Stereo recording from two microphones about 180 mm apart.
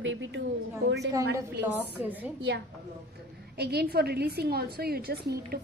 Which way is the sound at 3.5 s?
65° right (ahead or behind).